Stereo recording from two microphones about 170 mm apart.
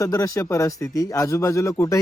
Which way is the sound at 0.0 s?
20° left (ahead or behind).